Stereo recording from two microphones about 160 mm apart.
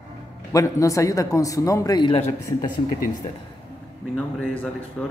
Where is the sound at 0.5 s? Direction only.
20° left (ahead or behind).